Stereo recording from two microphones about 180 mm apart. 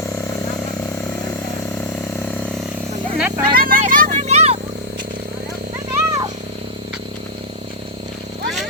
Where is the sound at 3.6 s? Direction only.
50° right (ahead or behind); by 4.6 s 35° right (ahead or behind).